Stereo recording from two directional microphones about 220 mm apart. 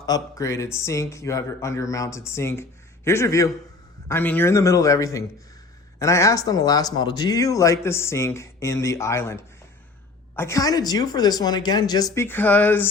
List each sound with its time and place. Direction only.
0.0 s speech: 15° left (ahead or behind)